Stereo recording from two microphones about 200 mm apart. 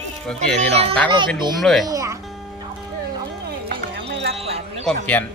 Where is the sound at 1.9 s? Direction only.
15° right (ahead or behind).